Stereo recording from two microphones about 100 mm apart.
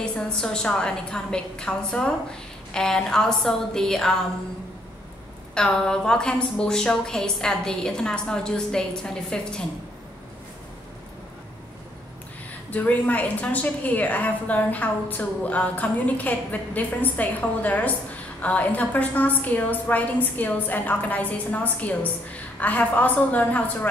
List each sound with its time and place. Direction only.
0.0 s a woman's voice: 10° left (ahead or behind)
5.5 s a woman's voice: 5° left (ahead or behind)
12.7 s a woman's voice: 15° left (ahead or behind)